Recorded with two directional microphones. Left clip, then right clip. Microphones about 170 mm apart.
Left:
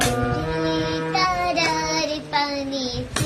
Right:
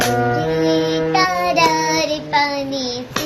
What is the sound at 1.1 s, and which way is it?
Child singing, centre (ahead or behind).